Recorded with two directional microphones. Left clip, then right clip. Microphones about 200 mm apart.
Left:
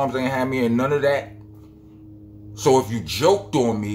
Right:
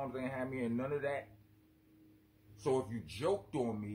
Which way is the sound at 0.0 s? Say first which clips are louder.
Left 18 dB; centre (ahead or behind).